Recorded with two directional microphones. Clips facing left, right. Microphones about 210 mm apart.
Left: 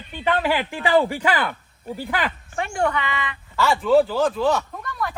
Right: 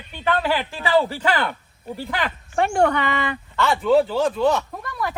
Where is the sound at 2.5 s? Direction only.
55° right (ahead or behind).